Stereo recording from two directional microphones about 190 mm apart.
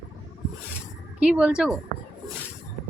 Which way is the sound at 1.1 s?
5° right (ahead or behind).